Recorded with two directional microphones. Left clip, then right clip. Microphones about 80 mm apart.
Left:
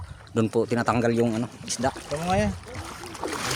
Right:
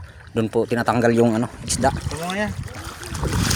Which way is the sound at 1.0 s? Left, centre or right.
Right.